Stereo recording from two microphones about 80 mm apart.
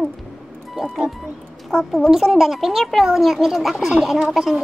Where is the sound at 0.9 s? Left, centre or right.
Centre.